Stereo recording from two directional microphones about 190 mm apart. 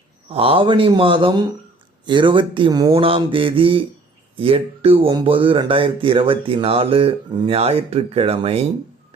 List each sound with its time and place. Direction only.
0.3 s speech: 30° right (ahead or behind)